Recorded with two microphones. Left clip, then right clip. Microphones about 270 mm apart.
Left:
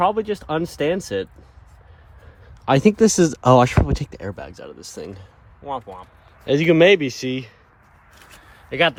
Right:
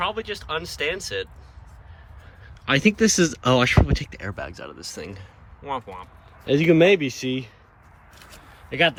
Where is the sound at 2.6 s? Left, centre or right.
Left; by 7.5 s centre.